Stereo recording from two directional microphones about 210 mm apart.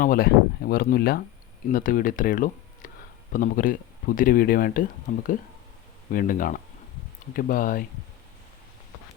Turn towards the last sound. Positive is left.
turn(degrees=40)  # may be behind; listen again after turning